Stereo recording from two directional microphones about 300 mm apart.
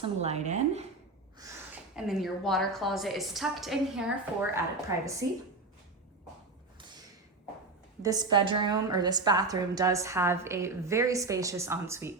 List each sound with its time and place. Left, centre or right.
0.0 s speech: right
1.4 s a woman's voice: centre
8.0 s a woman's voice: centre